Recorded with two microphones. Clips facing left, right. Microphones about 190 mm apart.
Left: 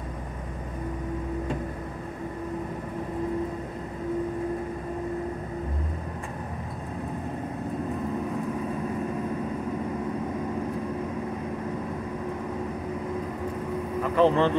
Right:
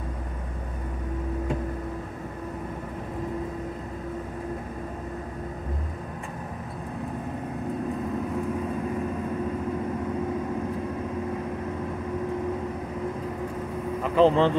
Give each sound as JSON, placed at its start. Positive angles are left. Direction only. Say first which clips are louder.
{"t": 14.0, "sound": "speech", "louder": "right 2 dB", "side_deg": -20}